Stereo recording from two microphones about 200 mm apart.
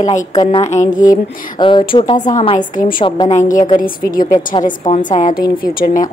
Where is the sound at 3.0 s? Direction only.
25° left (ahead or behind).